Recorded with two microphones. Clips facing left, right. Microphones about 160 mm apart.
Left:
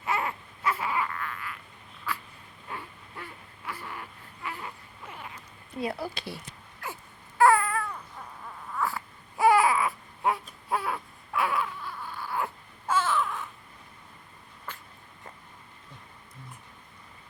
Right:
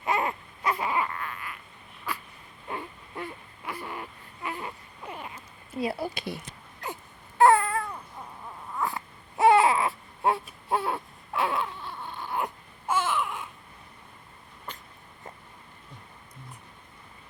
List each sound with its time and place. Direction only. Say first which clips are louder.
0.0 s baby cry: right 3 dB; 20° right (ahead or behind)
2.1 s a sound: even; 15° right (ahead or behind)
4.4 s baby cry: right 3 dB; 20° right (ahead or behind)
6.1 s speech: right 4 dB; 15° right (ahead or behind)
6.8 s wail: right 2 dB; 20° right (ahead or behind)
7.3 s babbling: right 2 dB; 25° right (ahead or behind)
8.7 s baby cry: even; 20° right (ahead or behind)
12.9 s a sound: even; 15° right (ahead or behind)